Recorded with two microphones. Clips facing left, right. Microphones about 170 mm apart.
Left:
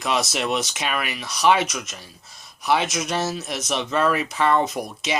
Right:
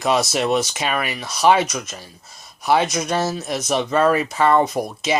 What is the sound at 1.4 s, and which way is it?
Mantra, 45° right (ahead or behind).